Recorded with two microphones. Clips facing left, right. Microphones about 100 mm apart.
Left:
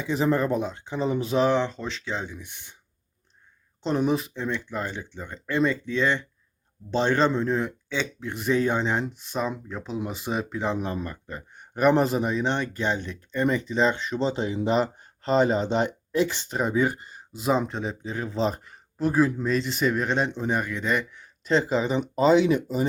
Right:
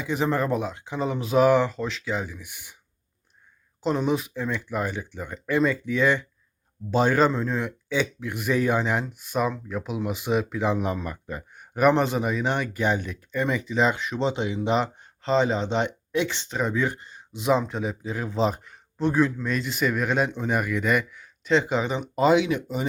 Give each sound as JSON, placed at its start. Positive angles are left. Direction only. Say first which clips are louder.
{"t": 0.0, "sound": "speech", "louder": "left 1 dB", "side_deg": 0}
{"t": 3.8, "sound": "speech", "louder": "even", "side_deg": 0}
{"t": 10.8, "sound": "speech", "louder": "right 2 dB", "side_deg": -15}
{"t": 14.3, "sound": "speech", "louder": "right 1 dB", "side_deg": 35}
{"t": 16.5, "sound": "speech", "louder": "left 2 dB", "side_deg": 5}
{"t": 22.4, "sound": "speech", "louder": "left 4 dB", "side_deg": 40}